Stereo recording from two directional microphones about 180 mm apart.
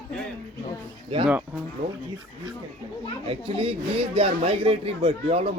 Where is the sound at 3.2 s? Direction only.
30° right (ahead or behind).